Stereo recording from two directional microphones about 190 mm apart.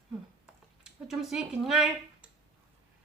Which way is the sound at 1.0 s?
Centre (ahead or behind).